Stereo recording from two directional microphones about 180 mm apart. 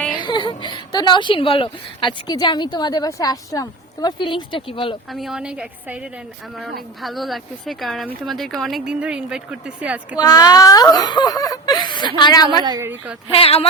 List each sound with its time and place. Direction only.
0.2 s speech: 25° left (ahead or behind)
5.1 s speech: centre (ahead or behind)
7.0 s speech: centre (ahead or behind)
10.2 s speech: 20° left (ahead or behind)
12.6 s a woman's voice: 20° right (ahead or behind)
13.3 s speech: 30° left (ahead or behind)